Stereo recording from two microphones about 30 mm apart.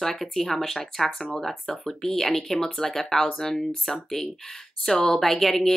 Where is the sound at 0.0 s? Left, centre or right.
Centre.